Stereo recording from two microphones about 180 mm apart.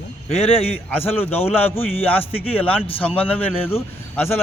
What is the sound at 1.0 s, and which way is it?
Speech, 10° left (ahead or behind).